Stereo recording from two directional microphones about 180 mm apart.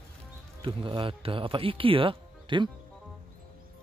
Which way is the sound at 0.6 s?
30° right (ahead or behind).